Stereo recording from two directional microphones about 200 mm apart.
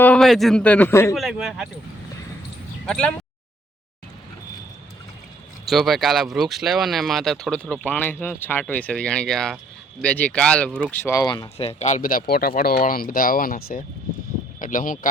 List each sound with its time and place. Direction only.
0.0 s a man's voice: 5° left (ahead or behind)
1.1 s speech: centre (ahead or behind)
2.8 s speech: 5° left (ahead or behind)
5.6 s speech: centre (ahead or behind)
11.0 s speech: 15° left (ahead or behind)
11.5 s speech: 30° left (ahead or behind)
14.6 s speech: 40° left (ahead or behind)